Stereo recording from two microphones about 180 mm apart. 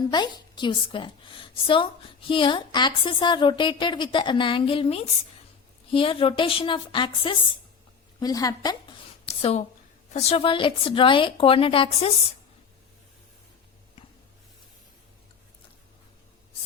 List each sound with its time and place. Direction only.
0.1 s a woman's voice: 25° left (ahead or behind)
9.2 s a woman's voice: 35° left (ahead or behind)